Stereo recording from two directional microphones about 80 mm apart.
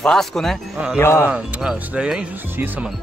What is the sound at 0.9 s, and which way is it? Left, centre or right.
Speech, left.